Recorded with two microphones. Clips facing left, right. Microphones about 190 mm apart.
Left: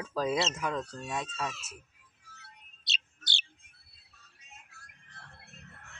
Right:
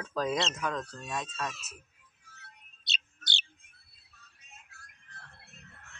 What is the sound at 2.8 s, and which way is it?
Bird, centre (ahead or behind).